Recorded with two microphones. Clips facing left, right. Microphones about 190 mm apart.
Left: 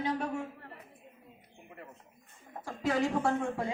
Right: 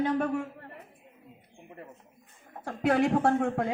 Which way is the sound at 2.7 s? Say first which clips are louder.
Right 5 dB; 60° right (ahead or behind).